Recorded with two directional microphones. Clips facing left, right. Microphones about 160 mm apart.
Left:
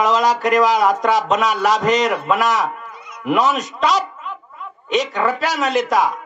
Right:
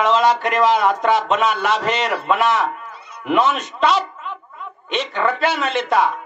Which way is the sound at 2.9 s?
30° right (ahead or behind).